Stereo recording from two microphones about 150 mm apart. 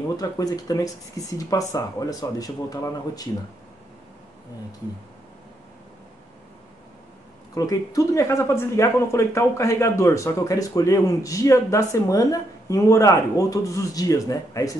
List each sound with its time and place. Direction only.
0.2 s speech: 25° left (ahead or behind)
7.5 s speech: 25° left (ahead or behind)